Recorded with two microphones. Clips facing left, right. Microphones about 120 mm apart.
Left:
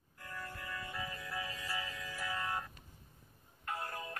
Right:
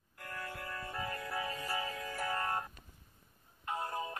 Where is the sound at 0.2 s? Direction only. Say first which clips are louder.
Right 3 dB; 70° right (ahead or behind); by 2.6 s 50° right (ahead or behind).